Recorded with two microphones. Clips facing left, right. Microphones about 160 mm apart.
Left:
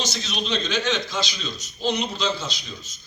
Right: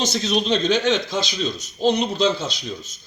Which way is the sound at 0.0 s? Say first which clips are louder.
Right 8 dB; 50° right (ahead or behind).